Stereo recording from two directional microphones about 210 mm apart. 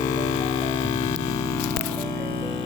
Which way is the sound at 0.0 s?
20° left (ahead or behind).